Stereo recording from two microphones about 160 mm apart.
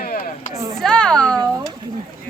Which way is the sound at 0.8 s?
5° left (ahead or behind).